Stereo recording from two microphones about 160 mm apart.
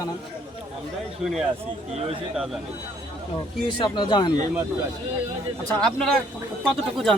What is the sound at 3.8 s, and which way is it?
Speech, 30° left (ahead or behind).